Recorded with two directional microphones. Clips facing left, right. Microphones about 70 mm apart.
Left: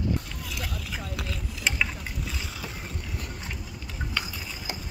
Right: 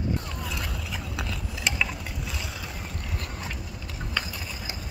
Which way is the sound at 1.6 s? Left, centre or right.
Centre.